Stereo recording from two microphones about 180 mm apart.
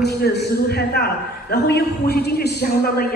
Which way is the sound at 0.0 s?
65° left (ahead or behind).